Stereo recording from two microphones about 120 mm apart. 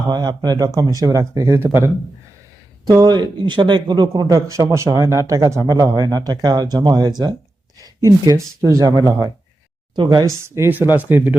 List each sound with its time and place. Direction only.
0.1 s speech: 35° right (ahead or behind); by 1.9 s 20° right (ahead or behind)
2.8 s speech: 30° right (ahead or behind)
4.1 s speech: 25° right (ahead or behind)
10.2 s speech: 25° right (ahead or behind)